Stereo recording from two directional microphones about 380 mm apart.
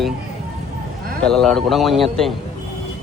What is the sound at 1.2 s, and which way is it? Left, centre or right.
Speech, centre.